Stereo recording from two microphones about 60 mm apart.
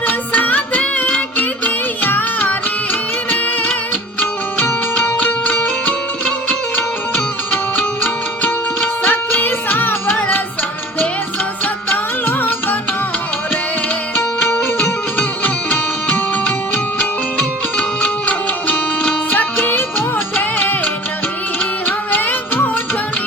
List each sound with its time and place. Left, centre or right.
0.1 s music: left
8.0 s music: left
11.6 s music: left
15.2 s music: left
19.0 s music: left